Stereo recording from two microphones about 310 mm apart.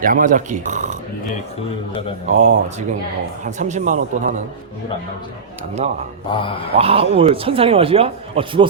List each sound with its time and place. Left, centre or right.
0.0 s speech: right
2.2 s a man's voice: right
6.3 s mantra: centre
6.7 s a man's voice: centre